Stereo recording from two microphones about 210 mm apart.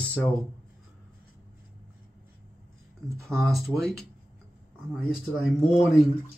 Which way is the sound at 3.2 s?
Centre (ahead or behind).